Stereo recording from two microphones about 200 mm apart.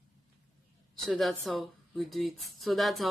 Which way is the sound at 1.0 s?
Centre (ahead or behind).